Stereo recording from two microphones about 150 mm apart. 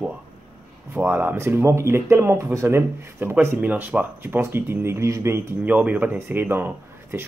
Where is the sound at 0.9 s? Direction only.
10° right (ahead or behind).